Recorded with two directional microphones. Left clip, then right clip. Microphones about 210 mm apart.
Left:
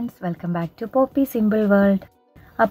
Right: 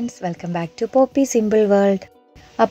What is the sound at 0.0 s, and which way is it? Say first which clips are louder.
Speech: right 3 dB; 25° right (ahead or behind).